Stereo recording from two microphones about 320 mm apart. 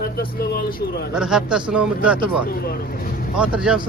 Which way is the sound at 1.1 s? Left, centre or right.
Centre.